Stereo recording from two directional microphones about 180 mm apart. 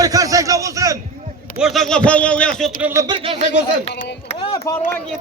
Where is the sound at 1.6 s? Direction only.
Centre (ahead or behind).